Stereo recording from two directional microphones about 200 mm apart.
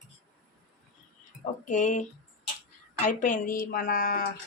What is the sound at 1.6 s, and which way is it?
Speech, 35° left (ahead or behind).